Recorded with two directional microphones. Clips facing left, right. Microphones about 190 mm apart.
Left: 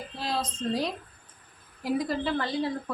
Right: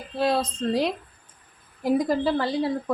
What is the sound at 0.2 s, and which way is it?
Speech, 60° right (ahead or behind).